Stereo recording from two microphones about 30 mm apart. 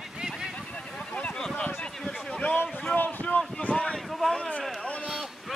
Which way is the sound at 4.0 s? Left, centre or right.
Centre.